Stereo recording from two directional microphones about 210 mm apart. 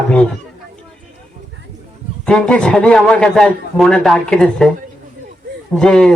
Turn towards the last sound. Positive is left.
turn(degrees=5)  # may be behind; listen again after turning